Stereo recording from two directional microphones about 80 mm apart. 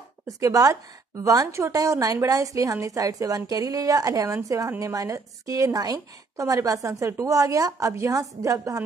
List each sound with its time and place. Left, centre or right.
0.4 s a woman's voice: right